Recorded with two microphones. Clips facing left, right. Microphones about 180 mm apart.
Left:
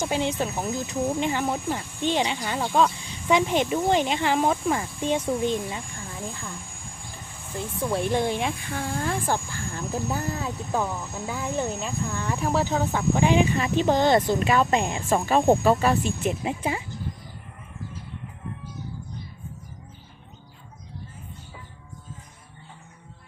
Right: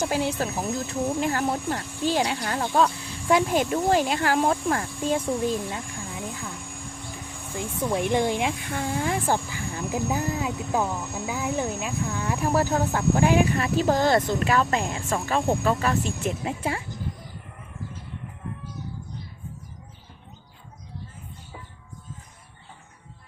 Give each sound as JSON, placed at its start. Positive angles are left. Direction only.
{"t": 0.0, "sound": "speech", "side_deg": -5}
{"t": 7.6, "sound": "speech", "side_deg": -15}
{"t": 14.4, "sound": "speech", "side_deg": 25}
{"t": 16.4, "sound": "speech", "side_deg": 10}